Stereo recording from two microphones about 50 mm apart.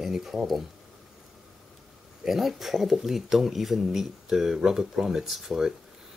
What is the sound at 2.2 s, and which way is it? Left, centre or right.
Speech, centre.